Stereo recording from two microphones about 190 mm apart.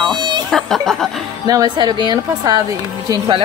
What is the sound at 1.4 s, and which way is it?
Speech, 20° right (ahead or behind).